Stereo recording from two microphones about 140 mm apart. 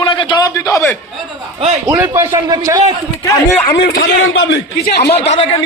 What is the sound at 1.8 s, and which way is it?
A man's voice, 25° right (ahead or behind).